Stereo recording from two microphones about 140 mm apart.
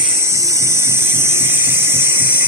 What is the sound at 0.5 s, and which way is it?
Electric toothbrush, 20° right (ahead or behind).